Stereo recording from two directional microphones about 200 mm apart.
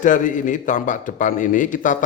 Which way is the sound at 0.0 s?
40° left (ahead or behind).